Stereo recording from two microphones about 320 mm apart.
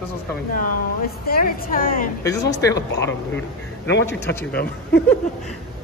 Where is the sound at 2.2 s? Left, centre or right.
Centre.